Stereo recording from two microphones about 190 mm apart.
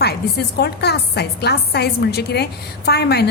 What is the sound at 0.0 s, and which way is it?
Speech, 60° left (ahead or behind).